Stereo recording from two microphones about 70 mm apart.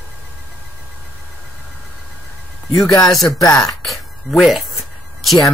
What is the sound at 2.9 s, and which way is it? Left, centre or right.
Speech, left.